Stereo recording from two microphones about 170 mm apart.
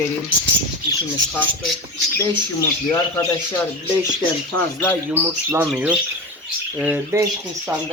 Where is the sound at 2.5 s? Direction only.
15° left (ahead or behind).